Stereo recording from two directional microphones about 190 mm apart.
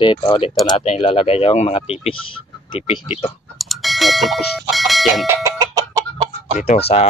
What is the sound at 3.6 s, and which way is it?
Bell, centre (ahead or behind).